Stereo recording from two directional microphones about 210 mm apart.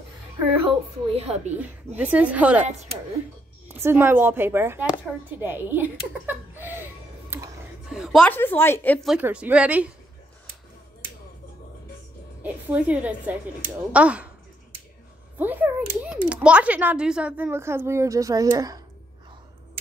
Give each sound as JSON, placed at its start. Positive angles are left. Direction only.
{"t": 0.7, "sound": "a woman's voice", "side_deg": -30}
{"t": 2.0, "sound": "speech", "side_deg": -5}
{"t": 3.8, "sound": "speech", "side_deg": -10}
{"t": 6.2, "sound": "laughter", "side_deg": -10}
{"t": 7.9, "sound": "a woman's voice", "side_deg": 0}
{"t": 9.1, "sound": "speech", "side_deg": -5}
{"t": 12.4, "sound": "speech", "side_deg": -5}
{"t": 15.3, "sound": "speech", "side_deg": -10}